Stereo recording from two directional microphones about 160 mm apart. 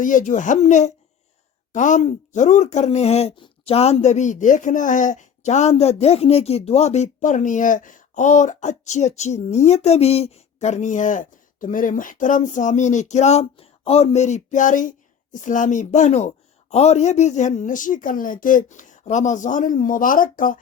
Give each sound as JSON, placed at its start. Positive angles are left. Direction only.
{"t": 0.0, "sound": "speech", "side_deg": 55}